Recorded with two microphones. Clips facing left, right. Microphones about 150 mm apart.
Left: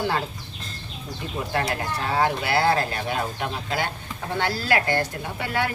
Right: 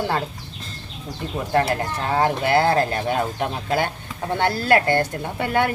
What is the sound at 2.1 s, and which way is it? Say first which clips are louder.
Speech: right 4 dB; 45° right (ahead or behind).